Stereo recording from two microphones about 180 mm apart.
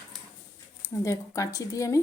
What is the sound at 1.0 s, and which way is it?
Speech, 15° left (ahead or behind).